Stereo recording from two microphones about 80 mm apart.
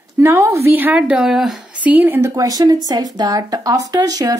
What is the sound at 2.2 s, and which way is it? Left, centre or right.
Speech, right.